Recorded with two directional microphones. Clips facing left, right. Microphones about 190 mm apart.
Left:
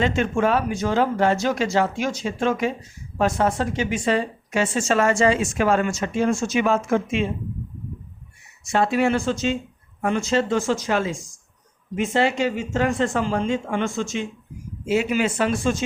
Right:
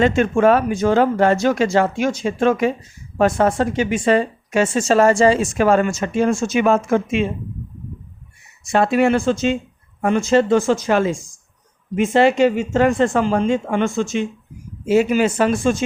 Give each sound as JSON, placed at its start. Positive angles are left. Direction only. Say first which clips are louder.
{"t": 0.0, "sound": "speech", "louder": "right 6 dB", "side_deg": -50}
{"t": 8.7, "sound": "speech", "louder": "right 4 dB", "side_deg": -60}
{"t": 14.8, "sound": "speech", "louder": "right 6 dB", "side_deg": -40}